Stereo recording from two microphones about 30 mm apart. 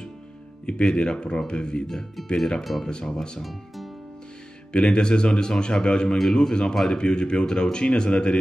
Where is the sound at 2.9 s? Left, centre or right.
Left.